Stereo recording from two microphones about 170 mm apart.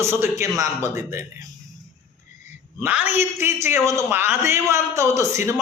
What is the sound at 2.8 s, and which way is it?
A man's voice, 10° right (ahead or behind).